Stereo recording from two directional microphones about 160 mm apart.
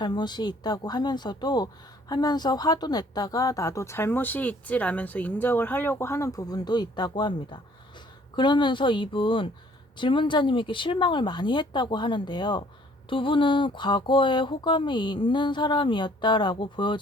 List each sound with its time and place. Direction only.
0.0 s speech: 25° left (ahead or behind)